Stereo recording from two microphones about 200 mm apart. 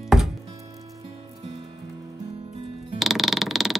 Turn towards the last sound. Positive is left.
turn(degrees=0)  # may be behind; listen again after turning